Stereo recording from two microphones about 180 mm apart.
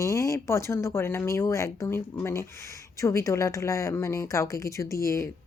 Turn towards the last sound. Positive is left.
turn(degrees=15)  # may be behind; listen again after turning